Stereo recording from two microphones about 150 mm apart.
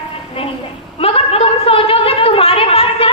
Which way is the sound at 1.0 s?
40° left (ahead or behind).